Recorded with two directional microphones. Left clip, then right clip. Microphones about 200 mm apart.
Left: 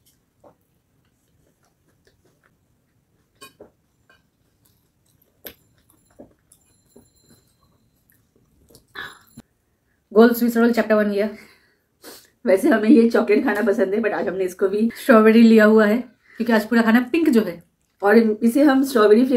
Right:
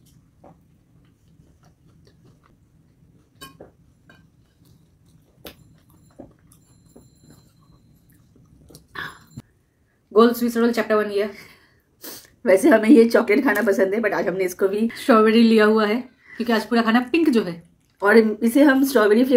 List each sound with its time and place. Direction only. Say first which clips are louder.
6.2 s a sound: right 2 dB; 15° right (ahead or behind)
8.7 s chewing: right 2 dB; 25° right (ahead or behind)
10.1 s speech: left 1 dB; 10° left (ahead or behind)
12.0 s speech: right 1 dB; 25° right (ahead or behind)
15.1 s speech: left 2 dB; 10° left (ahead or behind)
17.9 s speech: even; 20° right (ahead or behind)